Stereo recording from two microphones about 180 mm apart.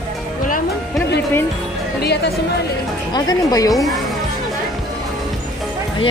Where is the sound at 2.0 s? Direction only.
65° left (ahead or behind).